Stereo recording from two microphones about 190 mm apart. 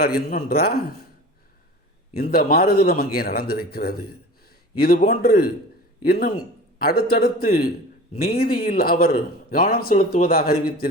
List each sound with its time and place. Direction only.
0.0 s speech: 50° left (ahead or behind)
2.1 s a man's voice: 55° left (ahead or behind)